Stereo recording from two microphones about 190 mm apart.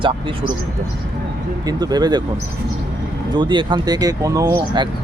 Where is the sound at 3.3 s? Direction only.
25° right (ahead or behind).